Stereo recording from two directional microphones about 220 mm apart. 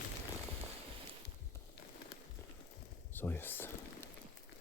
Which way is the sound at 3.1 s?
10° left (ahead or behind).